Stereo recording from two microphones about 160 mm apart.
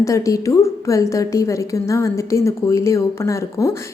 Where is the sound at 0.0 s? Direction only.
20° left (ahead or behind).